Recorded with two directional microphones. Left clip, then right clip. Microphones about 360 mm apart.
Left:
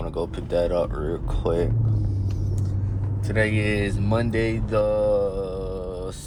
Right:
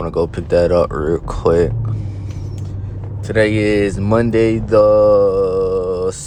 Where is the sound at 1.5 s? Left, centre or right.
Right.